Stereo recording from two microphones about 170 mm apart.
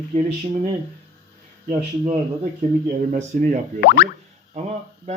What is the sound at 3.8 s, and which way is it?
Boing, 65° left (ahead or behind).